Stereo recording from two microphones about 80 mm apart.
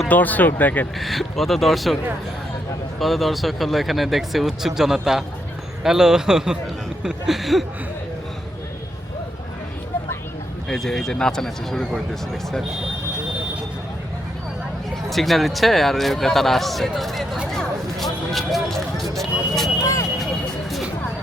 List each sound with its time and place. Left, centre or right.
0.1 s speech: left
0.9 s speech: centre
3.0 s speech: centre
10.7 s speech: centre
15.1 s speech: centre
17.5 s a sound: centre
19.1 s vehicle: centre
19.8 s vehicle: left